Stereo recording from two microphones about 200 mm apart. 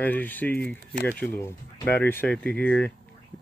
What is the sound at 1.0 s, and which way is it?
Speech, 10° left (ahead or behind).